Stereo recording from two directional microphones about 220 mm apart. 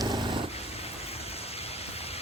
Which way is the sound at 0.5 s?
25° left (ahead or behind).